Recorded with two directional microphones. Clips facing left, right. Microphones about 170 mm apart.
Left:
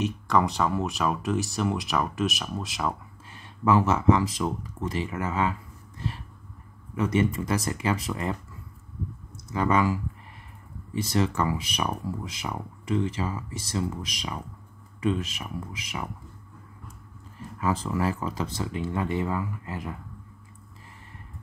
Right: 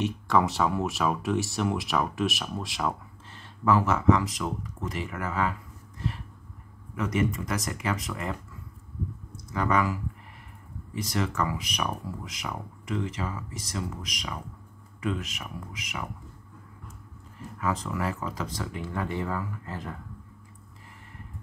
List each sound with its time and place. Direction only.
0.0 s speech: centre (ahead or behind)
3.3 s speech: 15° left (ahead or behind)
7.0 s speech: 30° left (ahead or behind)
9.5 s speech: 25° left (ahead or behind)
17.6 s speech: 30° left (ahead or behind); by 20.0 s 10° left (ahead or behind)